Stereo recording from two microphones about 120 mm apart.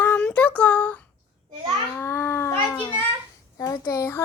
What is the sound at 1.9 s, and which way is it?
Babbling, 20° left (ahead or behind).